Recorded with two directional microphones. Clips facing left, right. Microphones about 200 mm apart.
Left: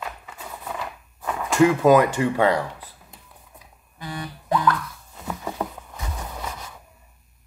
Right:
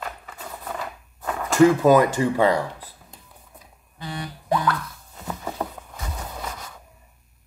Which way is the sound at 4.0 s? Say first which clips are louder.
Even; 25° right (ahead or behind).